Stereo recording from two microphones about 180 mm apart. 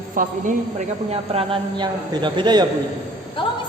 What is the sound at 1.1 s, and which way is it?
A man's voice, 30° right (ahead or behind).